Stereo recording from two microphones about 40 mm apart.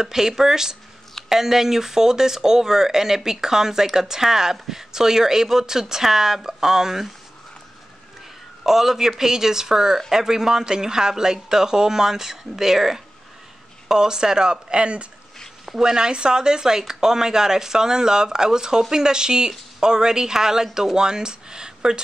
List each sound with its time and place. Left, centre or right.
0.0 s speech: centre
8.6 s speech: centre; by 15.0 s right
15.6 s speech: centre